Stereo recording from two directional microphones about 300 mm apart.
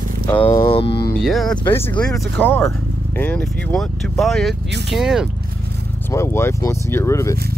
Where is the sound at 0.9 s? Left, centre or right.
Left.